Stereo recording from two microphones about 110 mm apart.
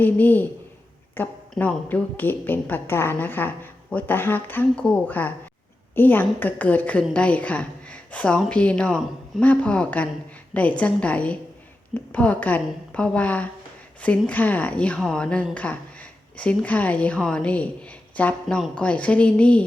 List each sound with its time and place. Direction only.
0.0 s a woman's voice: 15° left (ahead or behind)